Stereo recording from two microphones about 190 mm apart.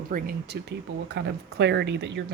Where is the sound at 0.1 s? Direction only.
55° right (ahead or behind).